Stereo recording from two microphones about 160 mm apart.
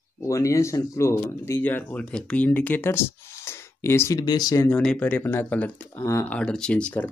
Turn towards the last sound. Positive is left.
turn(degrees=10)  # may be behind; listen again after turning